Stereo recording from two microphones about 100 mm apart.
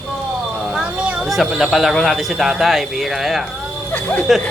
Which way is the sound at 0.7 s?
10° right (ahead or behind).